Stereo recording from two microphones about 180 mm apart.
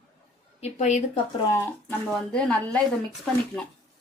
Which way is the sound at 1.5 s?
15° left (ahead or behind).